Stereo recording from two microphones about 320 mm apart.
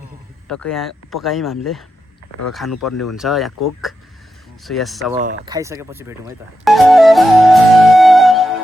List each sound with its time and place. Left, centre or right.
0.4 s speech: centre
2.7 s speech: left
3.2 s speech: centre
3.9 s a sound: centre
4.6 s speech: centre
5.5 s music: centre